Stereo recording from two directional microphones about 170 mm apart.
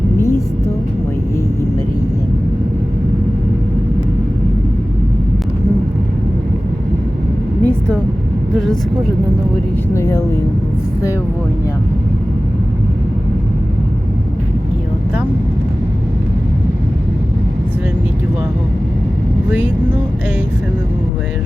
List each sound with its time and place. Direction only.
0.2 s music: 15° left (ahead or behind)
7.6 s vehicle: 10° left (ahead or behind)
8.5 s speech: centre (ahead or behind)
9.9 s speech: 15° left (ahead or behind)
19.5 s vehicle: 10° right (ahead or behind)